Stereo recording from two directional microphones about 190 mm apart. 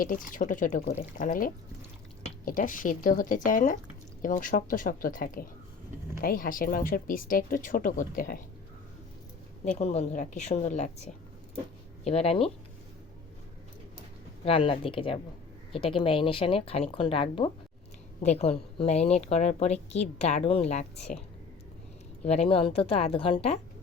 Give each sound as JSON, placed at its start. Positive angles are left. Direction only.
{"t": 0.0, "sound": "speech", "side_deg": 45}
{"t": 9.6, "sound": "a woman's voice", "side_deg": 35}
{"t": 14.4, "sound": "a woman's voice", "side_deg": 30}
{"t": 22.2, "sound": "speech", "side_deg": 30}